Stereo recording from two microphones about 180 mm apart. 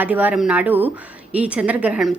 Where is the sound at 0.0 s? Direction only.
10° right (ahead or behind).